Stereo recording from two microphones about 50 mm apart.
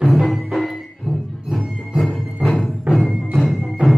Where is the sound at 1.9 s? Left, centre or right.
Centre.